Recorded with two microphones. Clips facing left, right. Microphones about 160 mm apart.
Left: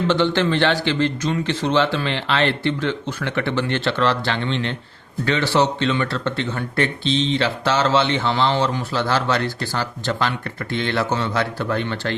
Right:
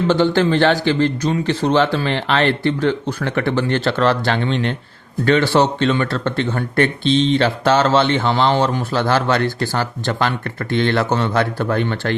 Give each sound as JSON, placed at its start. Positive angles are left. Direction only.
{"t": 0.1, "sound": "speech", "side_deg": -40}